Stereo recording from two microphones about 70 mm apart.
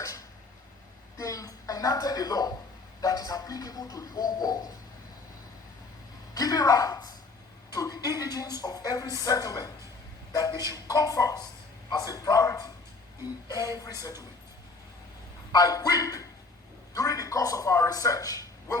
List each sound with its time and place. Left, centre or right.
0.0 s a sound: left
3.0 s a woman's voice: left
6.3 s a woman's voice: left
13.5 s a woman's voice: left
15.5 s a woman's voice: left